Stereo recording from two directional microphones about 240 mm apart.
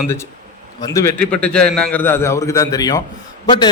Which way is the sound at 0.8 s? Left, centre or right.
Centre.